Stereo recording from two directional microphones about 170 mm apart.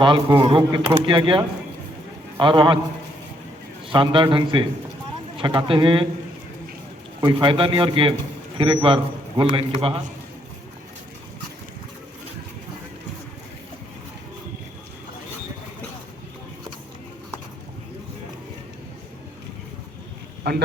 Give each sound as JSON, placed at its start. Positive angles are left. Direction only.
{"t": 0.0, "sound": "a man's voice", "side_deg": -30}
{"t": 3.8, "sound": "a man's voice", "side_deg": -30}
{"t": 7.2, "sound": "a man's voice", "side_deg": -25}
{"t": 20.4, "sound": "speech", "side_deg": -75}